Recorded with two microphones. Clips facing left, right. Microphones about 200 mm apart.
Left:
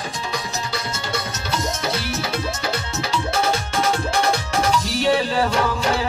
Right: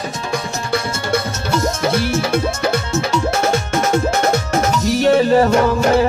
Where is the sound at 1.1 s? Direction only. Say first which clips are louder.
Right 8 dB; 50° right (ahead or behind).